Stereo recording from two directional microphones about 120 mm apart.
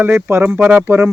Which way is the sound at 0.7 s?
20° right (ahead or behind).